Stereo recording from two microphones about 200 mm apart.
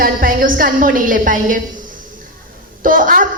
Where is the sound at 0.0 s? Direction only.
45° right (ahead or behind).